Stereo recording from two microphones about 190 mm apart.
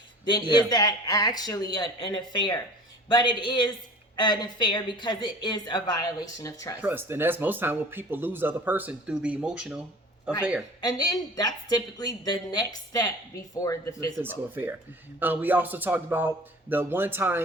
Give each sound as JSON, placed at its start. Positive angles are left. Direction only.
{"t": 0.3, "sound": "speech", "side_deg": 25}
{"t": 6.8, "sound": "speech", "side_deg": -10}
{"t": 10.8, "sound": "speech", "side_deg": 20}
{"t": 14.2, "sound": "speech", "side_deg": -10}